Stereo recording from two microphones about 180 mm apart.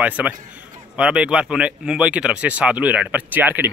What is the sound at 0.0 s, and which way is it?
Speech, 5° right (ahead or behind).